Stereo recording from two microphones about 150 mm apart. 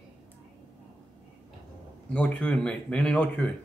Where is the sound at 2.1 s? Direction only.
10° left (ahead or behind).